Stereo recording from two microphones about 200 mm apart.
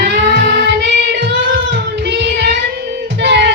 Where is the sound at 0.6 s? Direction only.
60° right (ahead or behind).